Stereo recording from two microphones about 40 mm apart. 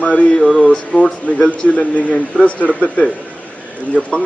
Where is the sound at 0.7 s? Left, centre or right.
Left.